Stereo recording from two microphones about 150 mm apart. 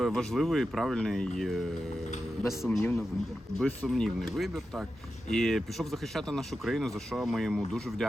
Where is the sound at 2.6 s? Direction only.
10° left (ahead or behind).